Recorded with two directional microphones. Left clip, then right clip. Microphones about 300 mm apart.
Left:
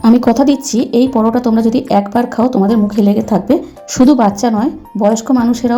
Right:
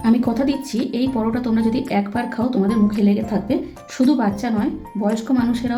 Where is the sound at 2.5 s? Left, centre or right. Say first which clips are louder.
Left 7 dB; centre.